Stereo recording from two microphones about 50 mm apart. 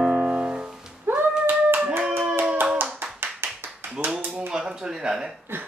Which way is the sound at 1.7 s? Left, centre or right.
Right.